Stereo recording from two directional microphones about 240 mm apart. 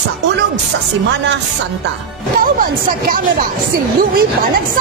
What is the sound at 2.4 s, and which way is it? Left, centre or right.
Speech, right.